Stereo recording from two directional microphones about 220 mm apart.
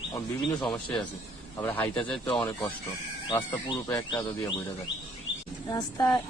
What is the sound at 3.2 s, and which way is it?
Speech, 20° left (ahead or behind).